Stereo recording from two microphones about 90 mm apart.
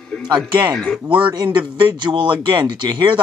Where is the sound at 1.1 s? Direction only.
55° right (ahead or behind).